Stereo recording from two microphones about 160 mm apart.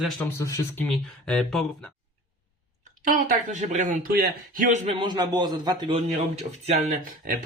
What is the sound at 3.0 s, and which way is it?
Speech, 55° right (ahead or behind).